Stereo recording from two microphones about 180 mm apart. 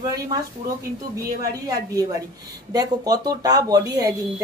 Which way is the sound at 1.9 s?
20° right (ahead or behind).